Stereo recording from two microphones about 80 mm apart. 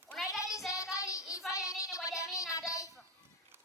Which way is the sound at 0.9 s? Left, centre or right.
Left.